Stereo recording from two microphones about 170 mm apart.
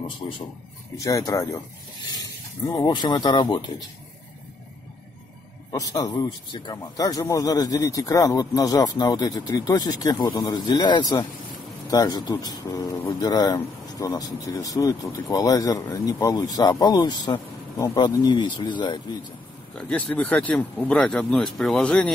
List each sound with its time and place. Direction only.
0.2 s speech: 25° left (ahead or behind)
2.6 s speech: 25° left (ahead or behind)
5.7 s speech: 20° left (ahead or behind)
19.8 s speech: 5° left (ahead or behind)